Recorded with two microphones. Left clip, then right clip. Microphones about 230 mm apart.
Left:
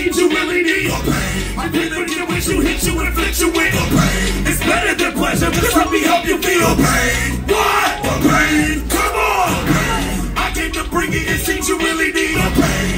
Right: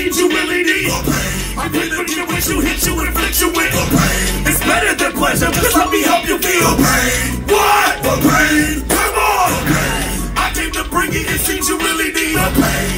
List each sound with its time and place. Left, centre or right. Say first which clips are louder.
3.5 s music: right 1 dB; right